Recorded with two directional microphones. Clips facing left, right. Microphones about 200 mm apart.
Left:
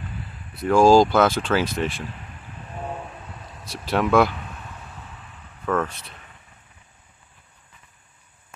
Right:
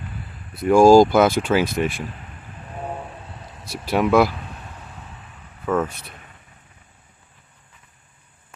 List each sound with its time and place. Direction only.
0.7 s speech: 10° right (ahead or behind)
3.7 s speech: 10° right (ahead or behind)
5.7 s speech: 10° right (ahead or behind)